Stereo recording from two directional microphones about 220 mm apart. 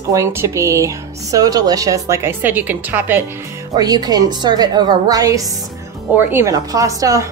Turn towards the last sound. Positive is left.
turn(degrees=-15)  # may be behind; listen again after turning